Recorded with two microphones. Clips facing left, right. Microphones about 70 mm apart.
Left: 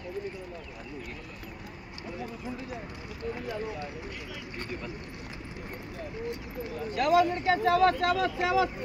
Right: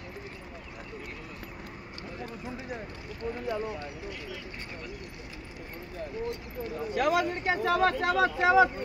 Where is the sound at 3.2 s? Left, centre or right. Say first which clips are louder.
Right 1 dB; centre.